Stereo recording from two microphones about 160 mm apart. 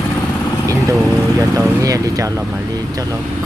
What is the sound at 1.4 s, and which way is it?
Speech, 20° right (ahead or behind).